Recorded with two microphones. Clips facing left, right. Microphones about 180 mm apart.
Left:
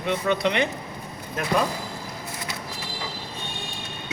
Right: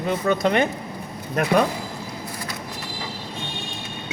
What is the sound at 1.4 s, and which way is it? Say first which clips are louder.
Speech: right 7 dB; 65° right (ahead or behind).